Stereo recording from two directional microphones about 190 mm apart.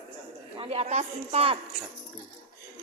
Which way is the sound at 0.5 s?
30° right (ahead or behind).